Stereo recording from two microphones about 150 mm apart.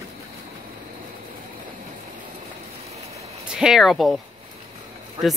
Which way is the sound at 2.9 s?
45° right (ahead or behind).